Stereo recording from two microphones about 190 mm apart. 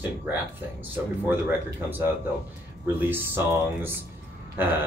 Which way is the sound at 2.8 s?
10° right (ahead or behind).